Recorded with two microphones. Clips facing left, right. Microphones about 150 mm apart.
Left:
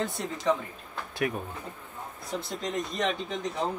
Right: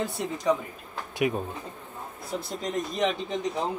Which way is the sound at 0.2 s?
5° right (ahead or behind).